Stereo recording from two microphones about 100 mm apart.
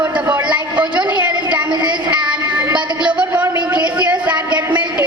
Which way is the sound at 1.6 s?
50° right (ahead or behind).